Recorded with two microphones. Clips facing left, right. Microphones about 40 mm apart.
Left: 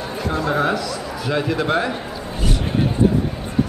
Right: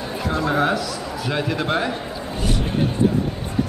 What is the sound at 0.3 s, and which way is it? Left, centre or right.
A man's voice, centre.